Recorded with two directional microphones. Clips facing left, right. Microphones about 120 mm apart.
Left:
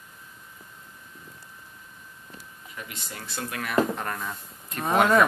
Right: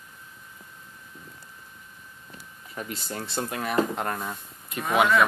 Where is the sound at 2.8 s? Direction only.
35° right (ahead or behind); by 4.3 s 20° right (ahead or behind).